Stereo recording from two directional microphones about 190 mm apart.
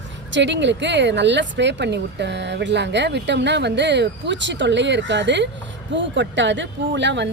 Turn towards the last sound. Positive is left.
turn(degrees=-70)  # may be behind; listen again after turning